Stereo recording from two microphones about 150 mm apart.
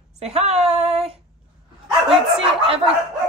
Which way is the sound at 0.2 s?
45° right (ahead or behind).